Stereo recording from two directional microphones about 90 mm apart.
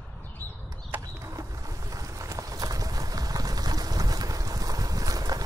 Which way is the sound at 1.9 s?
40° right (ahead or behind).